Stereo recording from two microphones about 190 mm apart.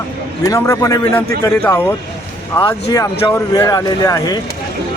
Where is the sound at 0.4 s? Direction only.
15° left (ahead or behind).